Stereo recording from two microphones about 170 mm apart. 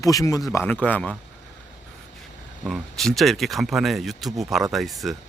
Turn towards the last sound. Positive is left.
turn(degrees=0)  # may be behind; listen again after turning